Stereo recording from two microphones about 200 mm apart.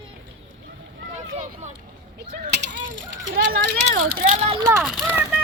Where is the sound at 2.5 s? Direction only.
60° right (ahead or behind).